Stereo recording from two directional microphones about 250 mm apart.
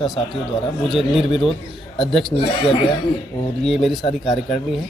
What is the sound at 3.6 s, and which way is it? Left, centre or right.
Speech, centre.